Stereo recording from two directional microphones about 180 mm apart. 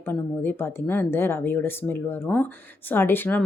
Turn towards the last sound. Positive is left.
turn(degrees=10)  # may be behind; listen again after turning